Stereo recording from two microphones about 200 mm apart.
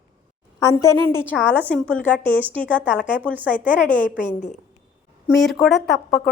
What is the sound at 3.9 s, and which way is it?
Speech, 40° left (ahead or behind).